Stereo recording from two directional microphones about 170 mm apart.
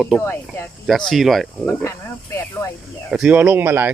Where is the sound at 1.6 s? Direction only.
15° left (ahead or behind).